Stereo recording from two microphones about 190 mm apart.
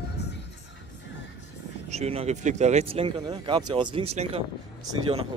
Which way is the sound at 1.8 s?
35° right (ahead or behind).